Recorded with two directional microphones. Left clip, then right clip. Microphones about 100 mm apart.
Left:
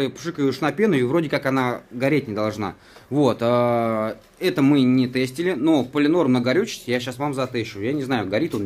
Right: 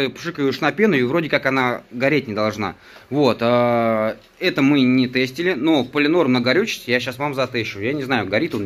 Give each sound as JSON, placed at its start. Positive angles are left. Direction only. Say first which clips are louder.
{"t": 0.0, "sound": "speech", "louder": "right 2 dB", "side_deg": 20}